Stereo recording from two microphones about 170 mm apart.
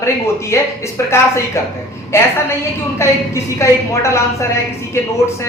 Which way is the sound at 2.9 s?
15° left (ahead or behind).